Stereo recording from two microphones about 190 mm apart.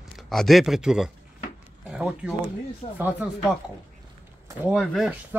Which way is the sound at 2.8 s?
30° left (ahead or behind).